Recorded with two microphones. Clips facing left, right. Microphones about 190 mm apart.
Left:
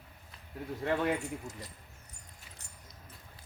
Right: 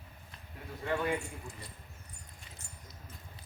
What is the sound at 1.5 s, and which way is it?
Speech, 40° left (ahead or behind).